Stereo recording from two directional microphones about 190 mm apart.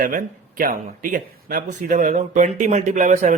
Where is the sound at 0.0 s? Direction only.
45° right (ahead or behind).